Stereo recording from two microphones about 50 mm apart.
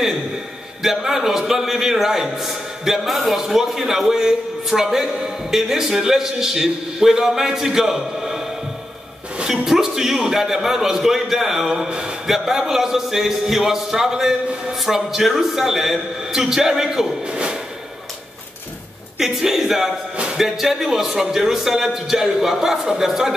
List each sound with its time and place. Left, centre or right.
0.8 s a man's voice: centre
17.3 s a sound: centre
19.1 s a man's voice: centre